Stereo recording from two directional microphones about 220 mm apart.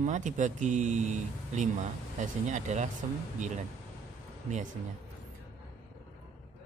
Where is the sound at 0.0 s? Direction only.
35° right (ahead or behind).